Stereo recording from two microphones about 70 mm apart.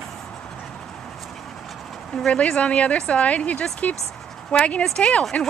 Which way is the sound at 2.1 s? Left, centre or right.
Centre.